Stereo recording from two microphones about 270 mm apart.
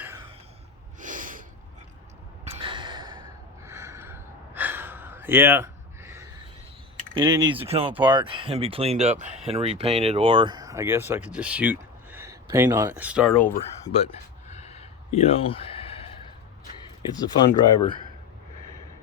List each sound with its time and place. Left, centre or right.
0.9 s snort: right
2.4 s gasp: right
7.1 s speech: centre
13.8 s a sound: left
17.1 s speech: centre